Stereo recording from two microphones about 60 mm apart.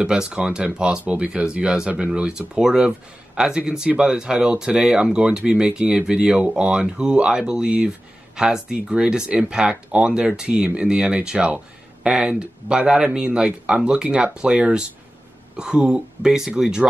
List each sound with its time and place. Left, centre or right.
0.0 s speech: centre